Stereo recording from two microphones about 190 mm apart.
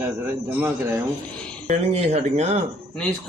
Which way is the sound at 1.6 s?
35° right (ahead or behind).